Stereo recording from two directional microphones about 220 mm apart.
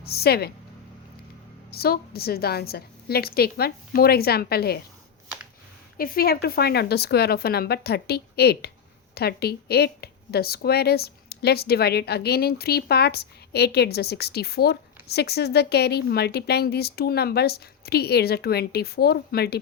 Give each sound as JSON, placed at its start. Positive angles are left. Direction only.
{"t": 0.0, "sound": "speech", "side_deg": 45}
{"t": 1.7, "sound": "speech", "side_deg": 45}
{"t": 6.0, "sound": "speech", "side_deg": 40}